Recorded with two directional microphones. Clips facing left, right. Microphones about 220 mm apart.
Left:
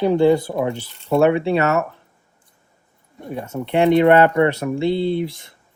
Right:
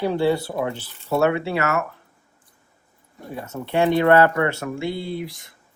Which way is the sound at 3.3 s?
20° left (ahead or behind).